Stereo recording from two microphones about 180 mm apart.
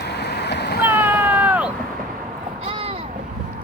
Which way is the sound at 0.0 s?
65° left (ahead or behind).